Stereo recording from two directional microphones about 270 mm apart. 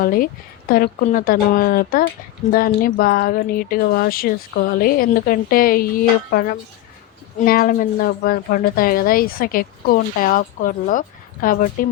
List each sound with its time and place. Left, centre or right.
0.0 s a woman's voice: left